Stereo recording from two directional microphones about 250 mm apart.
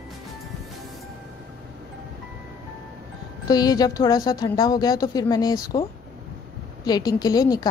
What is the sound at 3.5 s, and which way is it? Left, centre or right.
A woman's voice, centre.